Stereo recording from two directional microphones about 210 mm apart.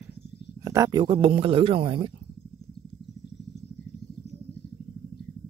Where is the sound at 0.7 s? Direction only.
15° right (ahead or behind).